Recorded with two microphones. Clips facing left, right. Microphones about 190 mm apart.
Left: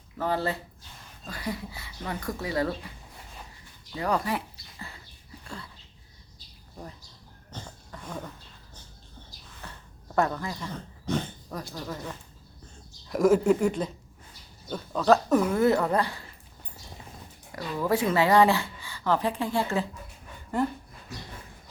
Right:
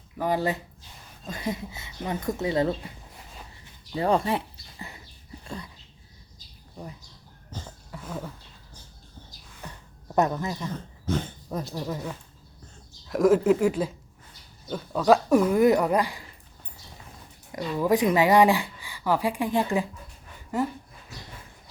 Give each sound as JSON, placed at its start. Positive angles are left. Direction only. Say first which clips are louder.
{"t": 0.2, "sound": "speech", "louder": "right 2 dB", "side_deg": -15}
{"t": 3.9, "sound": "speech", "louder": "right 4 dB", "side_deg": -25}
{"t": 5.5, "sound": "a sound", "louder": "right 4 dB", "side_deg": -15}
{"t": 7.5, "sound": "a sound", "louder": "right 2 dB", "side_deg": -5}
{"t": 9.6, "sound": "a sound", "louder": "right 3 dB", "side_deg": -15}
{"t": 10.2, "sound": "speech", "louder": "right 2 dB", "side_deg": -20}
{"t": 11.7, "sound": "speech", "louder": "right 4 dB", "side_deg": -15}
{"t": 13.1, "sound": "speech", "louder": "right 1 dB", "side_deg": 0}
{"t": 17.5, "sound": "speech", "louder": "right 3 dB", "side_deg": -15}